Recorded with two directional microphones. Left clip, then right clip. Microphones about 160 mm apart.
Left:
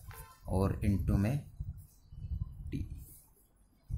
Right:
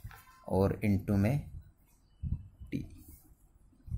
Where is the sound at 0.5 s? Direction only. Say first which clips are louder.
Right 5 dB; 20° right (ahead or behind).